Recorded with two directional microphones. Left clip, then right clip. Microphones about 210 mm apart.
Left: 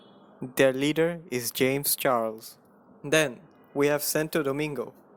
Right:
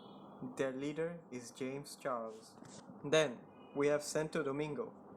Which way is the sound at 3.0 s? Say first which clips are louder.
Left 8 dB; 35° left (ahead or behind).